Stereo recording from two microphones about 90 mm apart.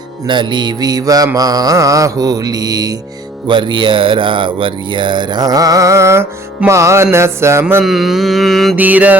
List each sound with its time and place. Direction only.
0.3 s music: 60° right (ahead or behind)
3.4 s speech: 65° right (ahead or behind); by 6.2 s 30° right (ahead or behind)
6.7 s music: 35° right (ahead or behind)
7.9 s mantra: 5° right (ahead or behind)
8.7 s mantra: 15° right (ahead or behind)